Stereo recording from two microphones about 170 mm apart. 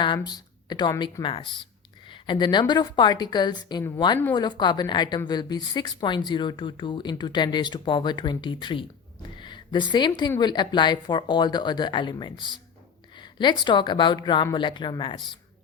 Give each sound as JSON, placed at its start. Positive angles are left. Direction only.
{"t": 0.3, "sound": "a woman's voice", "side_deg": 25}
{"t": 9.4, "sound": "a sound", "side_deg": 25}
{"t": 10.2, "sound": "a woman's voice", "side_deg": 25}